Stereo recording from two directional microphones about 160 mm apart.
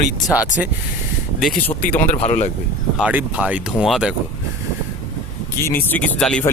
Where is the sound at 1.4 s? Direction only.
5° left (ahead or behind).